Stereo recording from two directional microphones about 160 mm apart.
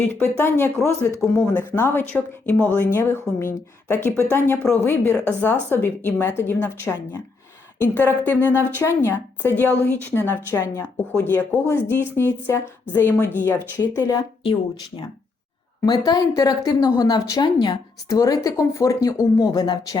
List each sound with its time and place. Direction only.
0.1 s speech: 15° left (ahead or behind)
15.9 s a woman's voice: 25° left (ahead or behind)